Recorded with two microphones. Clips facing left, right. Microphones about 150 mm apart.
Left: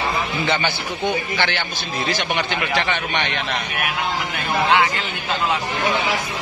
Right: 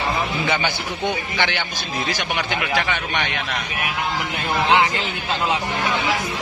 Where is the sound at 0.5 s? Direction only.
10° right (ahead or behind).